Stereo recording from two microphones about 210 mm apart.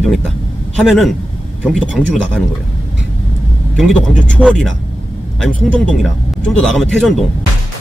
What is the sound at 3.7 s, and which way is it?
A man's voice, centre (ahead or behind).